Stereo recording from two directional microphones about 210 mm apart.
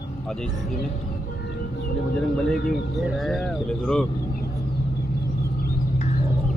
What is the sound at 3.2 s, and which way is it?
Speech, centre (ahead or behind).